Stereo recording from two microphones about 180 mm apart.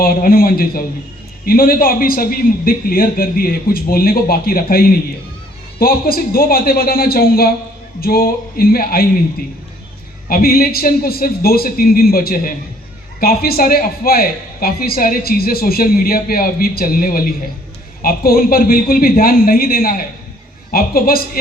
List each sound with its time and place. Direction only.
0.0 s a man's voice: 55° left (ahead or behind)
10.2 s a man's voice: 55° left (ahead or behind)